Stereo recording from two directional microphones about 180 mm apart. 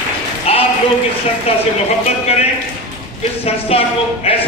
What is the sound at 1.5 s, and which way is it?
Speech, 35° left (ahead or behind).